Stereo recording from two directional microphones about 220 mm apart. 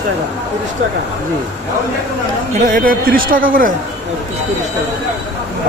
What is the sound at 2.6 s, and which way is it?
A man's voice, 40° right (ahead or behind).